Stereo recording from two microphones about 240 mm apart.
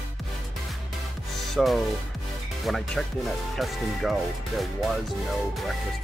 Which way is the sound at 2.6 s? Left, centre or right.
Centre.